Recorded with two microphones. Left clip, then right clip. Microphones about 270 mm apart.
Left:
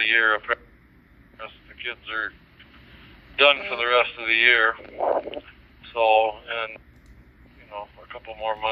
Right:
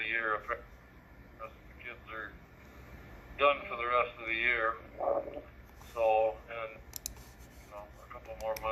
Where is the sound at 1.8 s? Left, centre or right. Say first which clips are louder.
Left 14 dB; centre.